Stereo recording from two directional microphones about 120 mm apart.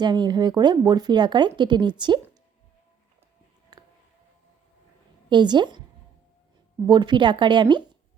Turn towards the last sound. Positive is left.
turn(degrees=-40)  # may be behind; listen again after turning